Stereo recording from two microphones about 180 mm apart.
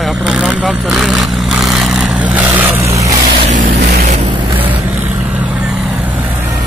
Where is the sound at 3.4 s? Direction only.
40° right (ahead or behind).